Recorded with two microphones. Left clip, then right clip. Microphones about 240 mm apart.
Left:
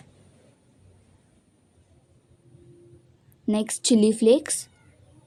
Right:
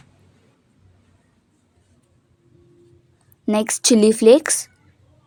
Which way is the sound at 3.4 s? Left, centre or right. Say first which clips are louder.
Right 7 dB; right.